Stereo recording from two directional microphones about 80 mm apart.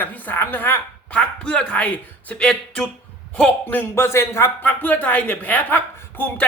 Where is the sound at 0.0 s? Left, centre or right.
Left.